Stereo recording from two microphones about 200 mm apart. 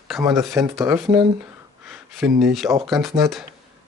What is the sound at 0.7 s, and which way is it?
Speech, centre (ahead or behind).